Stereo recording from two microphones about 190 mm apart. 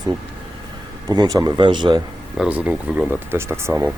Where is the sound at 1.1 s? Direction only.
20° right (ahead or behind).